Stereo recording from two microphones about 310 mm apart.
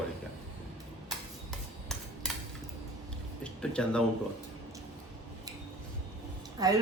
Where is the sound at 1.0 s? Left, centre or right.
Centre.